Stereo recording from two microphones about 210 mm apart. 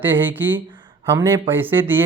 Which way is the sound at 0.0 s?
10° right (ahead or behind).